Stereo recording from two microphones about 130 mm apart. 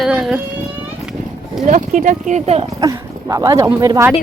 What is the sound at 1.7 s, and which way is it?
Speech, 70° right (ahead or behind).